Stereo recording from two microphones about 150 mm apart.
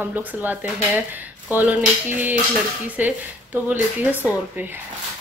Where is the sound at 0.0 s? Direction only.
10° right (ahead or behind).